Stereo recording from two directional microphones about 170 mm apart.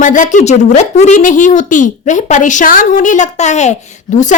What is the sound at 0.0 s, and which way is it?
Speech, 50° left (ahead or behind).